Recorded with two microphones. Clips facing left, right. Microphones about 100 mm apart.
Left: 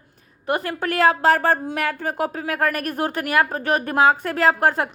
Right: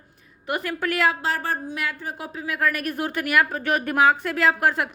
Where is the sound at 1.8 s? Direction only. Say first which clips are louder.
Left 7 dB; 55° left (ahead or behind).